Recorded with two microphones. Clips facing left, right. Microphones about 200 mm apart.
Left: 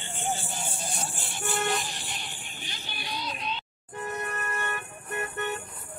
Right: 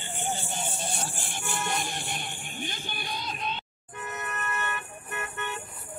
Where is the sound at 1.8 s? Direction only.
55° right (ahead or behind).